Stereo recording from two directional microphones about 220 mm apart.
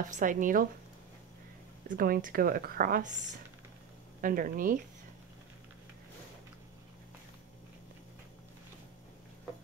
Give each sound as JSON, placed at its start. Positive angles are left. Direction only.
{"t": 0.1, "sound": "a woman's voice", "side_deg": -35}
{"t": 1.9, "sound": "a woman's voice", "side_deg": -40}
{"t": 4.2, "sound": "a woman's voice", "side_deg": -40}